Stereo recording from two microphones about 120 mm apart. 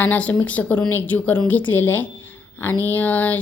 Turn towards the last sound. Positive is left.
turn(degrees=15)  # may be behind; listen again after turning